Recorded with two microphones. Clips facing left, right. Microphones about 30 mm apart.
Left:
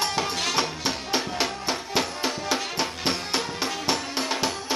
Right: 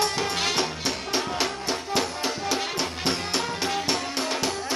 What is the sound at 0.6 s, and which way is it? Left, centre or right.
Music, centre.